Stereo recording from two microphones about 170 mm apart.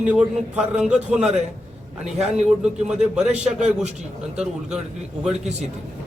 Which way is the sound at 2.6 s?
5° right (ahead or behind).